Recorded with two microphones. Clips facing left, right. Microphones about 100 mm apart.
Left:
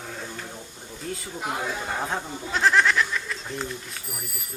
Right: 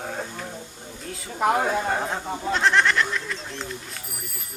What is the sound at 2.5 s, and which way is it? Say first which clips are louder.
Speech: even; centre (ahead or behind).